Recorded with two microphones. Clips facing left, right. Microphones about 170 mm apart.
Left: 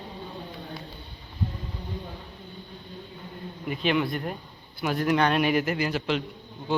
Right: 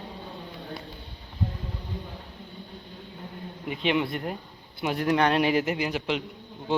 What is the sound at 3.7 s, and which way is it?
Speech, 20° right (ahead or behind).